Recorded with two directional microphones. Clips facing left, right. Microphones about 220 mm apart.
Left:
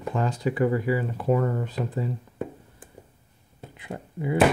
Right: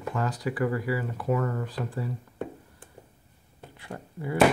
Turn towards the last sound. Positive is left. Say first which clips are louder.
# left 4 dB
turn(degrees=20)  # may be behind; listen again after turning